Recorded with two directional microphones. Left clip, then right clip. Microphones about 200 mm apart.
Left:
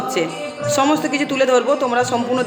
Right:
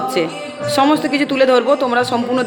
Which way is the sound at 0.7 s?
10° right (ahead or behind).